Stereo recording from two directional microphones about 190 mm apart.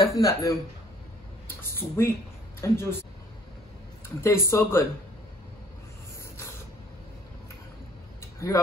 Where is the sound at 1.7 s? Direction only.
10° left (ahead or behind).